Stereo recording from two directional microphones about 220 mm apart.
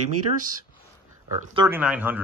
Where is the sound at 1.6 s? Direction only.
10° right (ahead or behind).